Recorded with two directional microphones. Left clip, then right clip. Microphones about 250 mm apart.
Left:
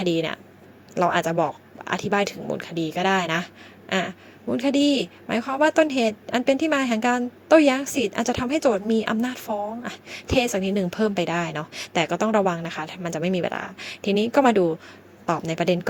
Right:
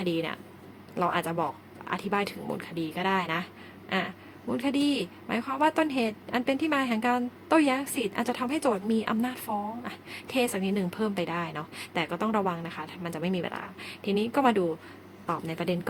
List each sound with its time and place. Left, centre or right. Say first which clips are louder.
0.0 s a woman's voice: left 6 dB; left